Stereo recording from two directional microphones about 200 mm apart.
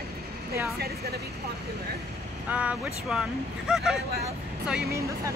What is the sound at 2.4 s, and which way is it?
Speech, 5° right (ahead or behind).